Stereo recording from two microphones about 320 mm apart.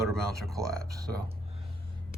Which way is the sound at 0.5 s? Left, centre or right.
Centre.